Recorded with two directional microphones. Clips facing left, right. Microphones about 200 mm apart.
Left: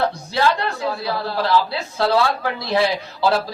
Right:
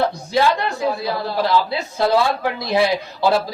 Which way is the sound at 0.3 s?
15° right (ahead or behind).